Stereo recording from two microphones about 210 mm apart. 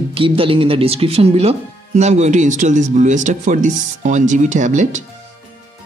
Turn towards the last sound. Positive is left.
turn(degrees=-35)  # may be behind; listen again after turning